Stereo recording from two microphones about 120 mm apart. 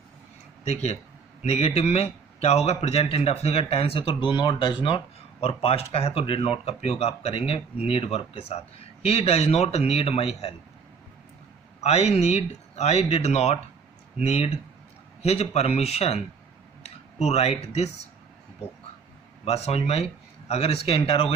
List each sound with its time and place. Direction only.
0.6 s a man's voice: 65° left (ahead or behind)
11.8 s a man's voice: 65° left (ahead or behind)
19.5 s a man's voice: 60° left (ahead or behind)